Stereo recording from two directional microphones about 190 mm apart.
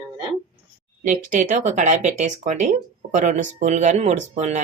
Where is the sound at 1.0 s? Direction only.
40° right (ahead or behind).